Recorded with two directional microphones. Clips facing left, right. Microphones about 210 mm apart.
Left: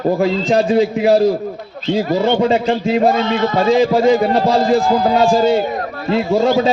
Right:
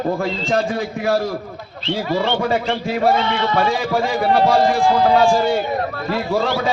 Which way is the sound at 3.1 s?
45° left (ahead or behind).